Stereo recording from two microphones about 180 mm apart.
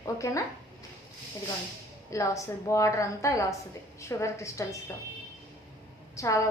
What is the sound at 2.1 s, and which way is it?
A woman's voice, 15° left (ahead or behind).